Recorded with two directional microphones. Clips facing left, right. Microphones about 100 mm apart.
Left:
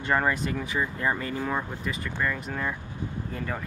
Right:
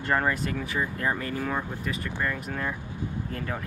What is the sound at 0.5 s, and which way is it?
Speech, 15° left (ahead or behind).